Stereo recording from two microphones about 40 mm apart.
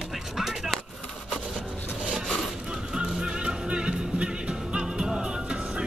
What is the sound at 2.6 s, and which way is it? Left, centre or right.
Music, right.